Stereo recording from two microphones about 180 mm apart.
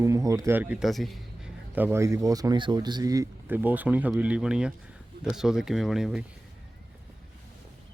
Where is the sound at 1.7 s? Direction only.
10° right (ahead or behind).